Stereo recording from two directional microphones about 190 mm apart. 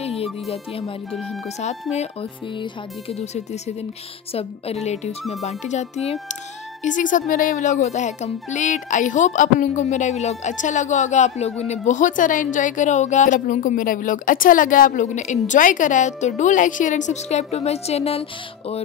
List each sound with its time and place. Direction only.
0.2 s a child's voice: 30° left (ahead or behind)